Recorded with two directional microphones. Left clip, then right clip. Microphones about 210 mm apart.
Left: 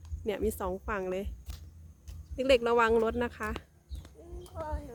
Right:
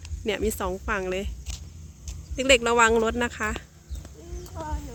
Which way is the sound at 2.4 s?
Centre (ahead or behind).